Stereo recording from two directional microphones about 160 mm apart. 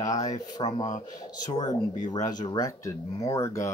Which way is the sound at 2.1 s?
25° left (ahead or behind).